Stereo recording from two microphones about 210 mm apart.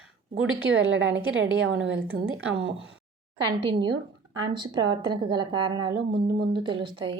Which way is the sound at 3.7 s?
20° right (ahead or behind).